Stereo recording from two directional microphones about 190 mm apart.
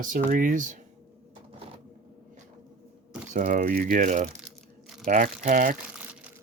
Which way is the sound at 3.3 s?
45° right (ahead or behind).